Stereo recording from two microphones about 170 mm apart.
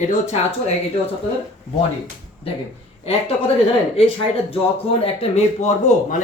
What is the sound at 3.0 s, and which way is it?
Speech, 35° left (ahead or behind).